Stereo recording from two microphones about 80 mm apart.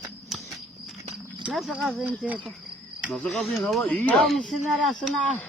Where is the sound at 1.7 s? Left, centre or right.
Centre.